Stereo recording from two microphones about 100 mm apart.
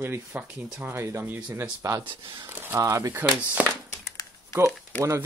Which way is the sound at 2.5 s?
25° right (ahead or behind).